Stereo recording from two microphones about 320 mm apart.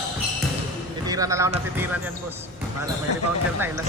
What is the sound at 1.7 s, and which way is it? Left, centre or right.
Speech, centre.